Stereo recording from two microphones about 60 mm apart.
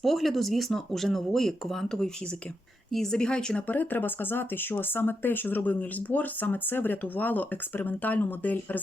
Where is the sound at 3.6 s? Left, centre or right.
Left.